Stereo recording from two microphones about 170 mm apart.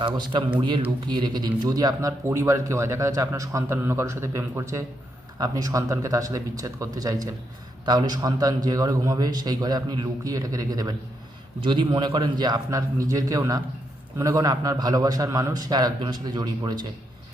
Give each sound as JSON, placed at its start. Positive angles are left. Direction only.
{"t": 0.0, "sound": "a man's voice", "side_deg": -30}